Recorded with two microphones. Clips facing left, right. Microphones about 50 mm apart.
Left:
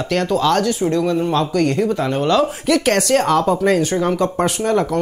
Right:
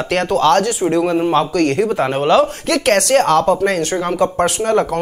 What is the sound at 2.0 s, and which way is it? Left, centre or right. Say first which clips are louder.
Speech: right 2 dB; right.